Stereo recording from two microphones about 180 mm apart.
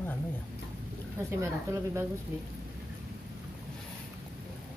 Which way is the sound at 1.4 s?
15° right (ahead or behind).